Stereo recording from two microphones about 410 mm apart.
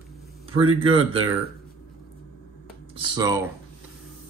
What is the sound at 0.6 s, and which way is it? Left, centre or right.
Speech, right.